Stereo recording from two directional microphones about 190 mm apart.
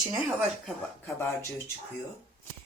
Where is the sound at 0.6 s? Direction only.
10° left (ahead or behind).